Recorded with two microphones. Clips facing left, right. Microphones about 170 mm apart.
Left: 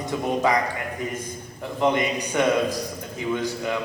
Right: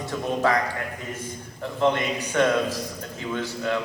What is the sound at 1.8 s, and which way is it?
A man's voice, 15° left (ahead or behind).